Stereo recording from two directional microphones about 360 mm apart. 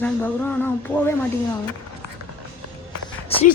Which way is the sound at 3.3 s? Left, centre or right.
Centre.